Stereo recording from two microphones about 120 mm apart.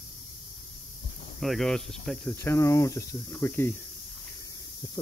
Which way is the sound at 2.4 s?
25° left (ahead or behind).